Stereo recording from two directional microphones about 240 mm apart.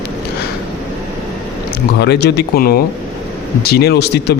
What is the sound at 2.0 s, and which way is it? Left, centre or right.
A man's voice, left.